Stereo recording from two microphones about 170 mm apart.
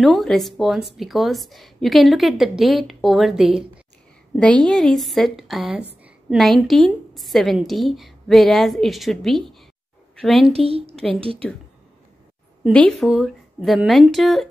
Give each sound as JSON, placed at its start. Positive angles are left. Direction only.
{"t": 0.0, "sound": "speech", "side_deg": 0}
{"t": 10.5, "sound": "a woman's voice", "side_deg": -35}
{"t": 12.7, "sound": "speech", "side_deg": 0}